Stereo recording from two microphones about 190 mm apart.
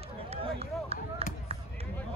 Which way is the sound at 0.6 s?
30° right (ahead or behind).